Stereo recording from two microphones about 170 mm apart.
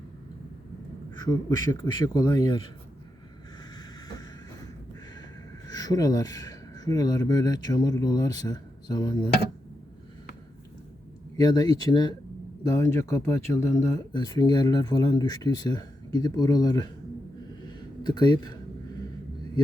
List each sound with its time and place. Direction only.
1.2 s speech: 20° left (ahead or behind)
3.8 s vehicle: 20° left (ahead or behind)
5.6 s speech: 20° left (ahead or behind)
11.3 s speech: 20° left (ahead or behind)
18.0 s speech: 25° left (ahead or behind)